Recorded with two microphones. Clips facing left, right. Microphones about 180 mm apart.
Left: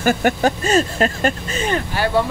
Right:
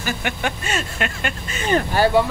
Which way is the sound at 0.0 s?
45° left (ahead or behind).